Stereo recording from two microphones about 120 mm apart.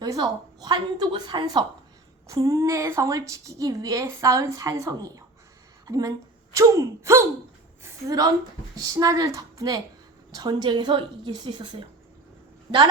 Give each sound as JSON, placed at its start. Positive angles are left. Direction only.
{"t": 0.0, "sound": "a woman's voice", "side_deg": -35}